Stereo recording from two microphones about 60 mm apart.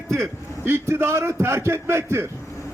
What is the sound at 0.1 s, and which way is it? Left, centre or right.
A man's voice, right.